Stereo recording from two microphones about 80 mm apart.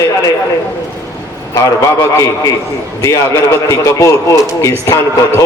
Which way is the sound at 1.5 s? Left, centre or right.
Left.